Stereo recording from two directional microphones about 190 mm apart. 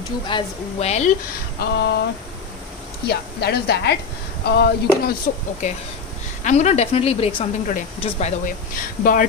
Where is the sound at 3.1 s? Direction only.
60° left (ahead or behind).